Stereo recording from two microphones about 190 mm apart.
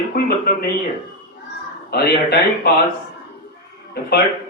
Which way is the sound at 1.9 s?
55° left (ahead or behind).